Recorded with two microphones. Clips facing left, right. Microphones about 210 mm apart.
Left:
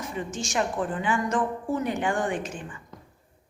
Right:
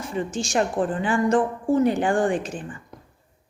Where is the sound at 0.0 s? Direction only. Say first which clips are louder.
Right 5 dB; 30° right (ahead or behind).